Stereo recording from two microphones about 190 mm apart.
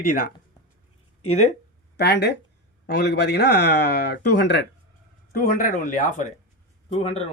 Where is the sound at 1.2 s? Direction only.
35° left (ahead or behind).